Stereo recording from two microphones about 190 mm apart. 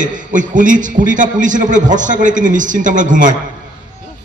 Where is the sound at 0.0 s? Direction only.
45° right (ahead or behind).